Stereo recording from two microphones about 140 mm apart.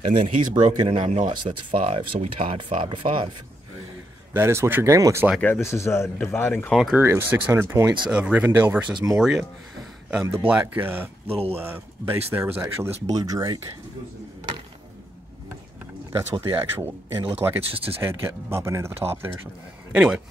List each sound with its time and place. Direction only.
0.2 s speech: 60° right (ahead or behind)
1.3 s speech: 40° right (ahead or behind)
4.3 s speech: 15° right (ahead or behind)
5.4 s speech: 15° left (ahead or behind)
6.7 s speech: 5° right (ahead or behind)
7.0 s speech: 15° right (ahead or behind)
8.9 s speech: 25° right (ahead or behind)
9.2 s speech: 5° right (ahead or behind)
10.5 s speech: 15° right (ahead or behind); by 13.6 s 30° right (ahead or behind)
16.1 s speech: 25° right (ahead or behind); by 20.2 s 10° right (ahead or behind)